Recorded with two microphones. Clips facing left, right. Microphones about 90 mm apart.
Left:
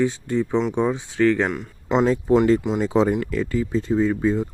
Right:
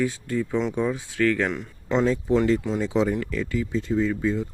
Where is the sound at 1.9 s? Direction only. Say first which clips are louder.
Left 4 dB; 40° left (ahead or behind).